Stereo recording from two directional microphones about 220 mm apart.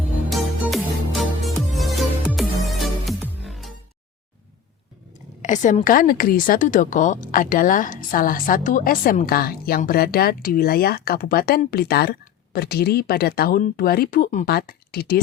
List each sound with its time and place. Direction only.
0.3 s music: centre (ahead or behind)
5.4 s a woman's voice: 35° left (ahead or behind)